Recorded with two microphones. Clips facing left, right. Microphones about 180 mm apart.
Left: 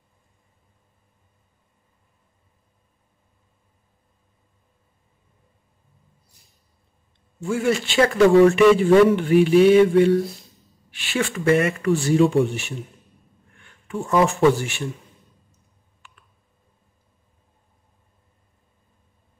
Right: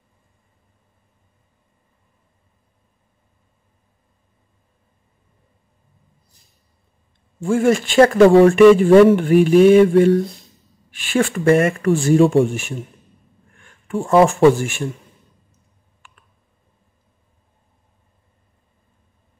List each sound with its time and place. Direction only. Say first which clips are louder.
7.4 s mantra: right 6 dB; 50° right (ahead or behind)
13.6 s a sound: right 3 dB; 50° right (ahead or behind)
14.5 s mantra: right 4 dB; 50° right (ahead or behind)